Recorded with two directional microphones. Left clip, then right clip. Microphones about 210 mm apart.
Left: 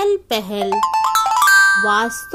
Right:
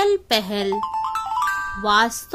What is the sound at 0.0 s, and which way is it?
Speech, 5° right (ahead or behind).